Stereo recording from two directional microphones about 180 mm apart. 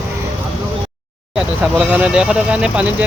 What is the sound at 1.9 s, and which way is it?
Speech, 5° right (ahead or behind).